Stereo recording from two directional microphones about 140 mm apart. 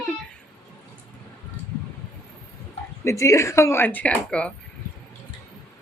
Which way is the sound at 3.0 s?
20° left (ahead or behind).